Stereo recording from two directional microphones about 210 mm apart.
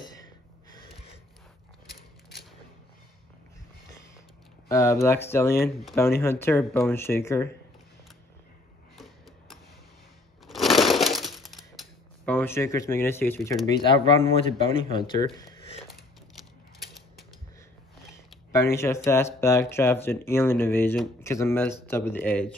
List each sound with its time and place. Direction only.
4.6 s speech: 15° left (ahead or behind)
8.9 s a sound: centre (ahead or behind)
10.4 s breaking: centre (ahead or behind)
12.3 s speech: 10° left (ahead or behind)
13.7 s speech: 25° left (ahead or behind)
18.5 s speech: 15° left (ahead or behind)